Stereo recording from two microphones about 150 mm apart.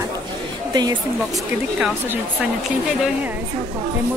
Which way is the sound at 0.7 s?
30° right (ahead or behind).